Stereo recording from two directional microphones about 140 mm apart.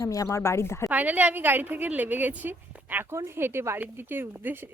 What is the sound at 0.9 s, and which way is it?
A woman's voice, 10° right (ahead or behind).